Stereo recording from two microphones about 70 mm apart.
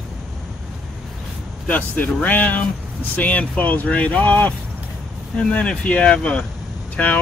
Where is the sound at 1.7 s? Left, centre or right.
Left.